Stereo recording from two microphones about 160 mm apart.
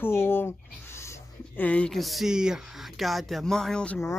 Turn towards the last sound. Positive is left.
turn(degrees=5)  # may be behind; listen again after turning